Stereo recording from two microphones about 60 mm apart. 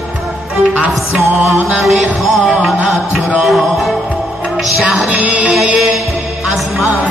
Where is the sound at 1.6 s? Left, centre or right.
Centre.